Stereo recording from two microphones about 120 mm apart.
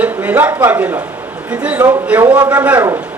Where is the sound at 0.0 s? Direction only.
15° right (ahead or behind).